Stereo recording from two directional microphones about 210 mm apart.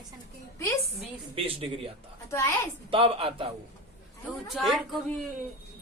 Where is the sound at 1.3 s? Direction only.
25° right (ahead or behind).